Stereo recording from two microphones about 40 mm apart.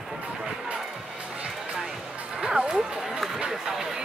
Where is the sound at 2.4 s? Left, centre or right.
Centre.